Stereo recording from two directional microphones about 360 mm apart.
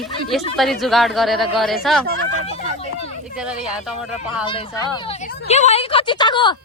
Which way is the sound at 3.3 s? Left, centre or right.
Centre.